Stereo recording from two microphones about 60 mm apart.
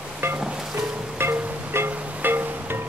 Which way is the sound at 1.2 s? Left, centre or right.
Right.